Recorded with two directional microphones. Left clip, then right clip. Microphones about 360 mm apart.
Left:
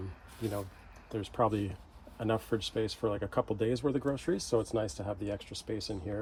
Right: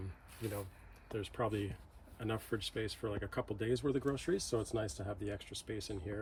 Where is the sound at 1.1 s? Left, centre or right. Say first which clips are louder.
Left 7 dB; centre.